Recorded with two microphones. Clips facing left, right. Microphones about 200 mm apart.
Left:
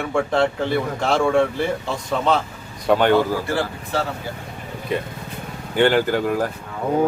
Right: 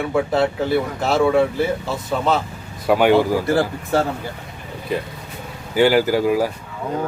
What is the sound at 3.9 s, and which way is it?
Speech, 50° right (ahead or behind).